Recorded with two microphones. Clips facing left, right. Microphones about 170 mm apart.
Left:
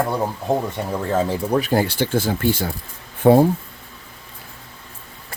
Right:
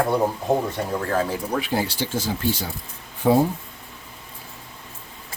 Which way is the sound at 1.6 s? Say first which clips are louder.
Left 5 dB; 50° left (ahead or behind).